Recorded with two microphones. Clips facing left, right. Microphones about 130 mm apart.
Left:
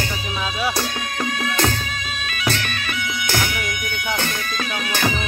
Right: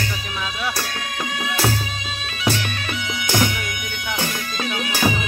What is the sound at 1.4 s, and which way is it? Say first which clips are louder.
Music: even; 5° right (ahead or behind).